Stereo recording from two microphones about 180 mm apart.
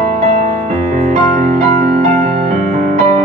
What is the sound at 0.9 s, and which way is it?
Music, 45° right (ahead or behind).